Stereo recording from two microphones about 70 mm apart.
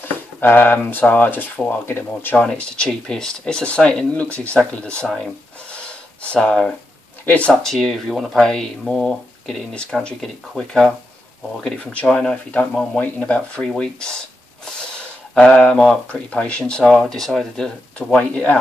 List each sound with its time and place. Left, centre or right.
0.0 s speech: left
2.3 s speech: centre
5.0 s speech: centre
5.7 s gasp: centre
7.2 s speech: centre
7.7 s speech: centre
11.8 s speech: centre
16.8 s speech: centre